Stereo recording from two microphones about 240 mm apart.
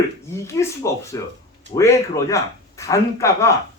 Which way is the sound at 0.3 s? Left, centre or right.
Centre.